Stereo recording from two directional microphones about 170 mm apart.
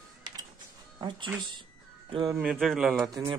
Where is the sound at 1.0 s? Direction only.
30° right (ahead or behind).